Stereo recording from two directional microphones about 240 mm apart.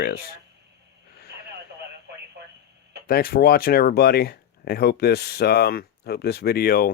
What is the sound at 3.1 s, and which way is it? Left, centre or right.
Speech, left.